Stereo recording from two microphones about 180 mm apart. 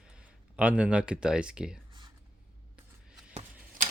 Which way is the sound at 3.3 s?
35° right (ahead or behind).